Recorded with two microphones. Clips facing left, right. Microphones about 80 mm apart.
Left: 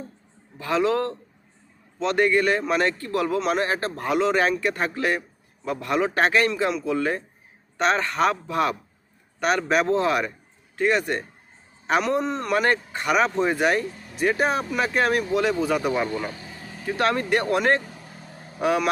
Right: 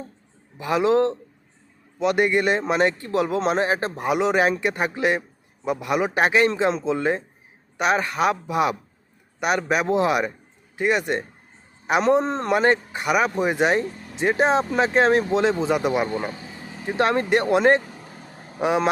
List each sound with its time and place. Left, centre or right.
0.5 s speech: centre
12.0 s speech: right